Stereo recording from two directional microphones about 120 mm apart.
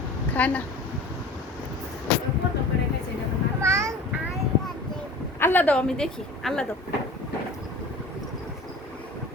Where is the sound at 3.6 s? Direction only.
20° right (ahead or behind).